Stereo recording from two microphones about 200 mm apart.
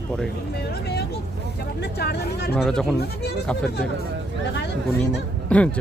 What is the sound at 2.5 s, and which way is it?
Speech, 5° left (ahead or behind).